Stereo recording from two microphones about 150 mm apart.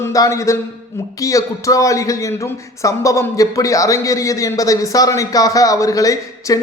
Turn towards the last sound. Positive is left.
turn(degrees=25)  # may be behind; listen again after turning